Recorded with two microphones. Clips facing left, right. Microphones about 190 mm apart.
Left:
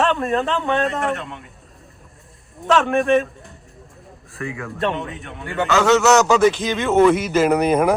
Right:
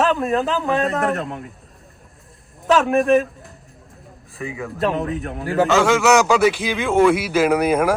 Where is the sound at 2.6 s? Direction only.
Centre (ahead or behind).